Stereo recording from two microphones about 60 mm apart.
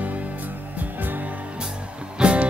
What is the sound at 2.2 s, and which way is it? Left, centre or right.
Music, right.